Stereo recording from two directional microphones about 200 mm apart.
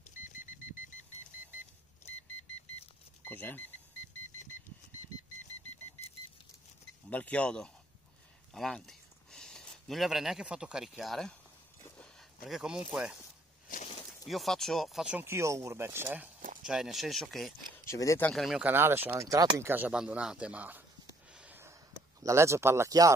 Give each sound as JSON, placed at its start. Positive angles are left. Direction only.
{"t": 0.2, "sound": "vehicle", "side_deg": 40}
{"t": 3.3, "sound": "speech", "side_deg": 10}
{"t": 7.1, "sound": "speech", "side_deg": 5}
{"t": 12.4, "sound": "speech", "side_deg": -5}
{"t": 14.2, "sound": "speech", "side_deg": 0}
{"t": 17.8, "sound": "speech", "side_deg": 15}
{"t": 18.3, "sound": "speech", "side_deg": 0}
{"t": 21.3, "sound": "a sound", "side_deg": -5}
{"t": 22.2, "sound": "speech", "side_deg": -15}